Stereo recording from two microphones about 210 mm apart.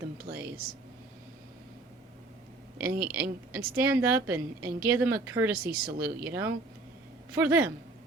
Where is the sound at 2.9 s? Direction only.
45° right (ahead or behind).